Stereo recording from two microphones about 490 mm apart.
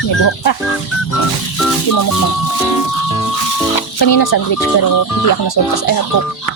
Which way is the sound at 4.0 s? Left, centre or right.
Left.